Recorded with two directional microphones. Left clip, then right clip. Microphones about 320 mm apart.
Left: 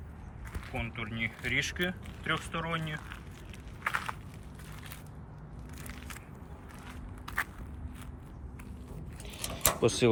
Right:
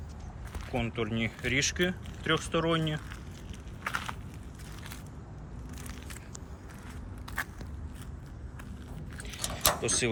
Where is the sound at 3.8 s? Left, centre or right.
Centre.